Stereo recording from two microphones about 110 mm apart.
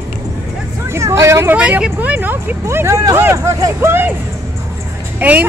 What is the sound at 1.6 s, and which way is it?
Speech, 10° right (ahead or behind).